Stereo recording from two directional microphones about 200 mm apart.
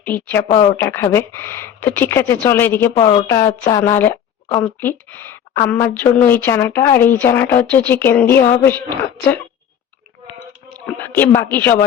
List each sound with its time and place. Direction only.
0.0 s speech: 10° left (ahead or behind)
10.8 s speech: 5° left (ahead or behind)